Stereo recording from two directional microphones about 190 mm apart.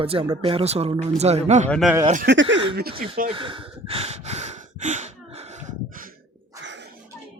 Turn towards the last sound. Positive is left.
turn(degrees=-70)  # may be behind; listen again after turning